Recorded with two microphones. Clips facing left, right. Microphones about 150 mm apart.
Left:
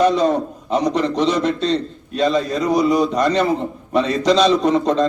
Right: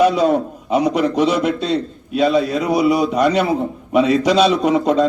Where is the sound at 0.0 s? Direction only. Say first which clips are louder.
Right 1 dB; 10° right (ahead or behind).